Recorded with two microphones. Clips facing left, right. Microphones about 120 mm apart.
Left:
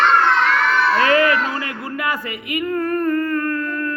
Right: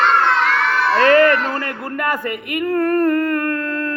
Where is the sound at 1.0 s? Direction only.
50° right (ahead or behind).